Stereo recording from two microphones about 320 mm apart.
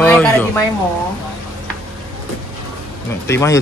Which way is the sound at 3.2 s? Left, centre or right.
Centre.